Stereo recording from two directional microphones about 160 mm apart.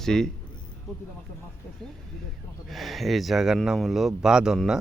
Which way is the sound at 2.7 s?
Centre (ahead or behind).